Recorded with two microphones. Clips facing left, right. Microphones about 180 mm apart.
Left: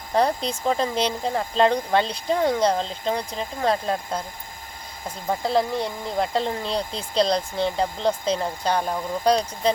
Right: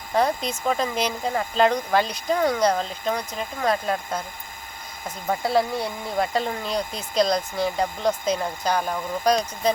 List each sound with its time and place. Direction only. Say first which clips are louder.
0.1 s speech: left 1 dB; 35° left (ahead or behind)
5.4 s speech: even; 5° right (ahead or behind)
5.8 s speech: even; 25° left (ahead or behind)